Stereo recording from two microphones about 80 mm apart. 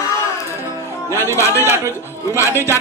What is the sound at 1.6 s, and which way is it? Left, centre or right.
A man's voice, right.